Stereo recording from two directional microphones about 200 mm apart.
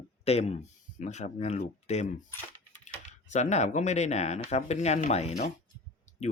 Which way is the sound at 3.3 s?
35° left (ahead or behind).